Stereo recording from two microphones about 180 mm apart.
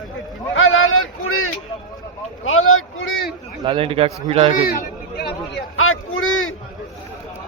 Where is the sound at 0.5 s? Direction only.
90° left.